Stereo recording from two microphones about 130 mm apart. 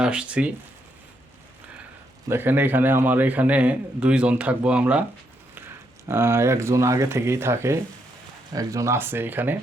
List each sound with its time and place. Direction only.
0.0 s a man's voice: 5° right (ahead or behind)
2.3 s a man's voice: 15° right (ahead or behind)